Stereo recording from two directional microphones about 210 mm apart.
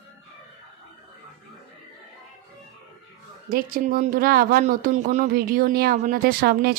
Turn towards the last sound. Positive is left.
turn(degrees=-45)  # may be behind; listen again after turning